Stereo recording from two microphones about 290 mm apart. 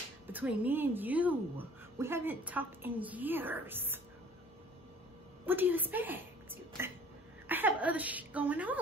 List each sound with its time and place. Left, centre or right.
0.3 s a woman's voice: centre
5.4 s a woman's voice: centre